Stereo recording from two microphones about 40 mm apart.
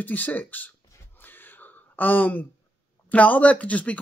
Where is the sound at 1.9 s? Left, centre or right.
Left.